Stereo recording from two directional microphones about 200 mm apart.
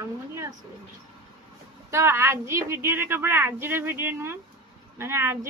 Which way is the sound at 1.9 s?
10° right (ahead or behind).